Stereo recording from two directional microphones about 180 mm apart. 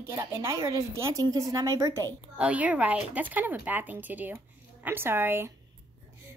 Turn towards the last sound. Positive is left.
turn(degrees=-10)  # may be behind; listen again after turning